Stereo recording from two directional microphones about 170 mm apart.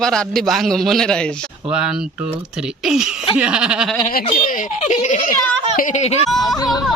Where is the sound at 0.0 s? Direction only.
5° left (ahead or behind).